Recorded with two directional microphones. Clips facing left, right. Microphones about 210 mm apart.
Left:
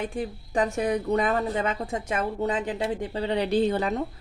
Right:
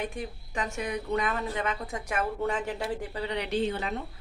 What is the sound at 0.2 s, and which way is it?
Speech, 35° left (ahead or behind).